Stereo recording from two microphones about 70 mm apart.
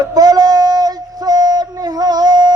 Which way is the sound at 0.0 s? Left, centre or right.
Right.